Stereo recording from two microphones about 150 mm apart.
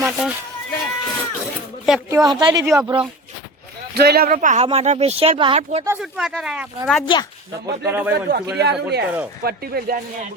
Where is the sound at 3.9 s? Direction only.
90° right; by 4.7 s 55° right (ahead or behind).